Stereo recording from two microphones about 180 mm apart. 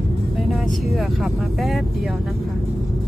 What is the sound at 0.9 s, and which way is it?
Speech, centre (ahead or behind).